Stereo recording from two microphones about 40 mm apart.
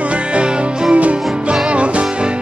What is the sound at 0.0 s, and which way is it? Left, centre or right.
Music, right.